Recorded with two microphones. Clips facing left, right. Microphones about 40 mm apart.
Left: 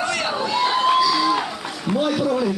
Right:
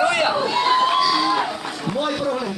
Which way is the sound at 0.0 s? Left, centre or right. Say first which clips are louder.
Right 4 dB; right.